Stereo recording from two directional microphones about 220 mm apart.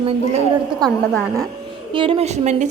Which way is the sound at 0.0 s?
25° right (ahead or behind).